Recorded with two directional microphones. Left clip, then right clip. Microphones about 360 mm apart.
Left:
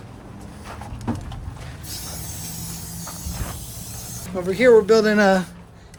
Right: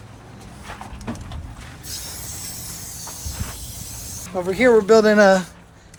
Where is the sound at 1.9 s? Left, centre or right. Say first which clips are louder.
Right 2 dB; left.